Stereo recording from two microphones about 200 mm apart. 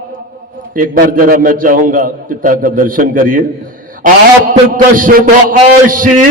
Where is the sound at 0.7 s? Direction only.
45° right (ahead or behind).